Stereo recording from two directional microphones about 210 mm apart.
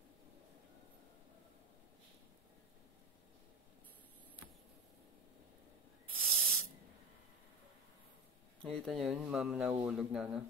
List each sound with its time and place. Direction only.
6.1 s spray: centre (ahead or behind)
8.8 s speech: centre (ahead or behind)